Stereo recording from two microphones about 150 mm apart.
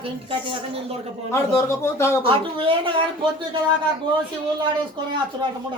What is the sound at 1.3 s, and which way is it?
Speech, 15° left (ahead or behind).